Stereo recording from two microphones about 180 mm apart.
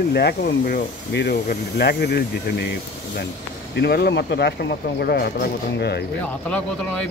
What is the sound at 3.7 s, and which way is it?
Speech, 60° left (ahead or behind).